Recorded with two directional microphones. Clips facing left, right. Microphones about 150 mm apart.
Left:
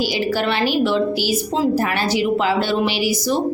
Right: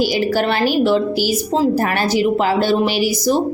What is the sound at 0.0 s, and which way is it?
A woman's voice, 45° right (ahead or behind).